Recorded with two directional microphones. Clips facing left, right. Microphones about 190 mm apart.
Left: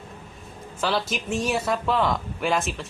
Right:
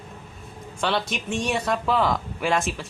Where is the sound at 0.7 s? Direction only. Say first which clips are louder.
Even; centre (ahead or behind).